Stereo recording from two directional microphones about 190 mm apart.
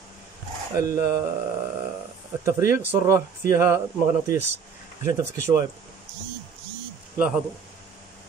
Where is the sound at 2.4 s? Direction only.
15° right (ahead or behind).